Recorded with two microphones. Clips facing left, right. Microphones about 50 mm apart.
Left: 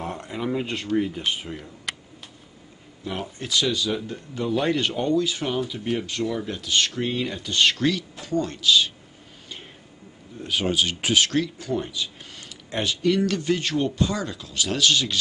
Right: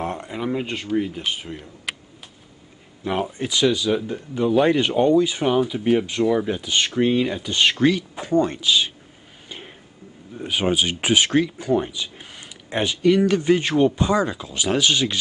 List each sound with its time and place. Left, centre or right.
0.2 s speech: centre
3.2 s speech: centre
10.4 s speech: right